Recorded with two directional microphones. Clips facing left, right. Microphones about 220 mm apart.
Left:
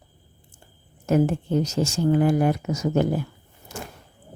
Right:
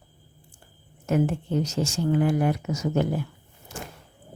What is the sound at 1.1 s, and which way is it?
Speech, 40° left (ahead or behind).